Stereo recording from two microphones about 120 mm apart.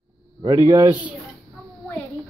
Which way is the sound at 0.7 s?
25° right (ahead or behind).